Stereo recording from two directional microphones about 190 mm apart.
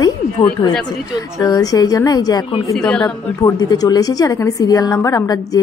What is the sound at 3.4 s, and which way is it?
A woman's voice, 20° left (ahead or behind).